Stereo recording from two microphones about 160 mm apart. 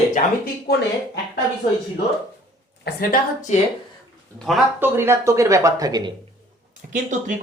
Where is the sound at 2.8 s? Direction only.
70° left (ahead or behind).